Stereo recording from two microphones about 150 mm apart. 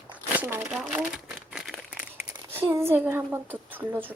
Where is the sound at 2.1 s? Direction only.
15° right (ahead or behind).